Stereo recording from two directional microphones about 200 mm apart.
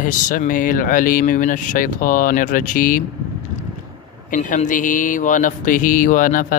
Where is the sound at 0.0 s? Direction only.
40° left (ahead or behind).